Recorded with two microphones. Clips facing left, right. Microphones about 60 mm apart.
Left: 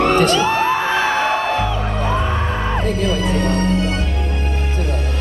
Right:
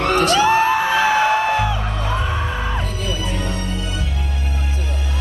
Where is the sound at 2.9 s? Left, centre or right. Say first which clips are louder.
Left 7 dB; left.